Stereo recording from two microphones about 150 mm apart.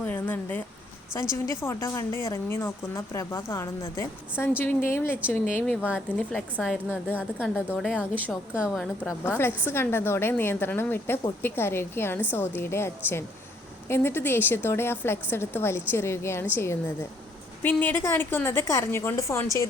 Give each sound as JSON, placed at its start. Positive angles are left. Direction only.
{"t": 0.0, "sound": "a sound", "side_deg": 10}
{"t": 1.3, "sound": "a woman's voice", "side_deg": 20}
{"t": 7.2, "sound": "a woman's voice", "side_deg": -10}
{"t": 9.0, "sound": "a woman's voice", "side_deg": 15}